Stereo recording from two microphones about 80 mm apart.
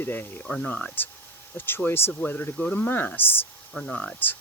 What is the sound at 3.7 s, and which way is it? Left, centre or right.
Speech, centre.